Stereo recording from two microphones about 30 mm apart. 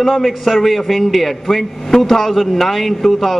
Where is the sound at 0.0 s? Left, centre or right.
Centre.